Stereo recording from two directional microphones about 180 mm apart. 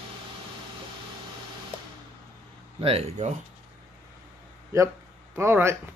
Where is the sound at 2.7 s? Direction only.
35° right (ahead or behind).